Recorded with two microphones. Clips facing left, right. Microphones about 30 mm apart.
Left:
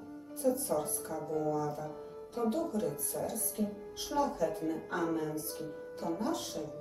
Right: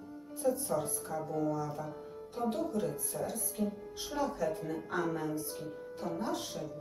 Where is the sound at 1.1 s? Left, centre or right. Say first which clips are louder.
Left 1 dB; centre.